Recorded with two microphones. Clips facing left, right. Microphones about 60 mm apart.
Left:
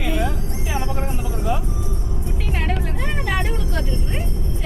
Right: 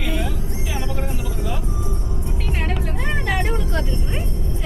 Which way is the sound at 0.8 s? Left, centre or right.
Left.